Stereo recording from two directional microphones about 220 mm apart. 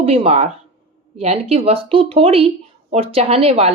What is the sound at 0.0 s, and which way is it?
Speech, 25° right (ahead or behind).